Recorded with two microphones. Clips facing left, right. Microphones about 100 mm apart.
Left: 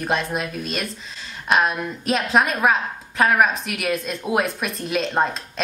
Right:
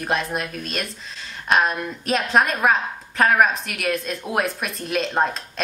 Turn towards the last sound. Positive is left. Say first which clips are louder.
# even
turn(degrees=0)  # may be behind; listen again after turning